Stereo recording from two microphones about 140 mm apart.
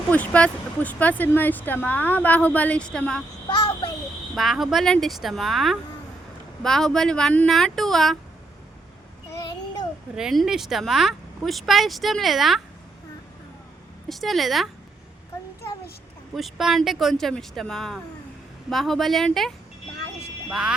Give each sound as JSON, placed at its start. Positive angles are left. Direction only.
{"t": 0.1, "sound": "speech", "side_deg": 10}
{"t": 3.5, "sound": "child singing", "side_deg": 35}
{"t": 4.4, "sound": "speech", "side_deg": 0}
{"t": 10.2, "sound": "speech", "side_deg": -5}
{"t": 14.1, "sound": "speech", "side_deg": 0}
{"t": 16.3, "sound": "speech", "side_deg": 0}